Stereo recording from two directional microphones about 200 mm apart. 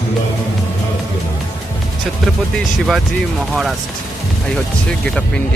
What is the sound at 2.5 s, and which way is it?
Speech, centre (ahead or behind).